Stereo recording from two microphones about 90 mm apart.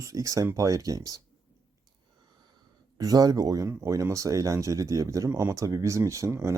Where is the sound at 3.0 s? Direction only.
45° right (ahead or behind).